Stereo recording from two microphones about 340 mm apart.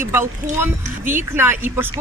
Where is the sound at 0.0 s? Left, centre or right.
Centre.